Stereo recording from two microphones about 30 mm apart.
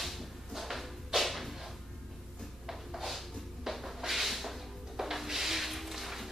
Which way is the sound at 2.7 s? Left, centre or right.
Centre.